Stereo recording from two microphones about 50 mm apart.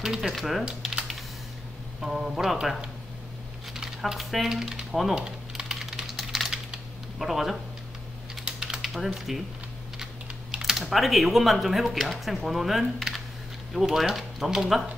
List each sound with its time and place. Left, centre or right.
0.0 s speech: centre
0.3 s speech: centre
2.0 s speech: centre
5.1 s typing: centre
7.2 s speech: centre
8.5 s typing: centre
8.8 s speech: centre
10.6 s speech: centre